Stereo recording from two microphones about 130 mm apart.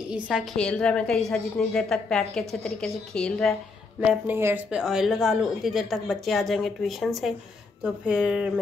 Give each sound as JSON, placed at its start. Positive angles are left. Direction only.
{"t": 0.1, "sound": "a woman's voice", "side_deg": -5}
{"t": 0.6, "sound": "a woman's voice", "side_deg": 5}
{"t": 4.0, "sound": "speech", "side_deg": -5}
{"t": 4.4, "sound": "speech", "side_deg": -20}
{"t": 4.6, "sound": "a woman's voice", "side_deg": -5}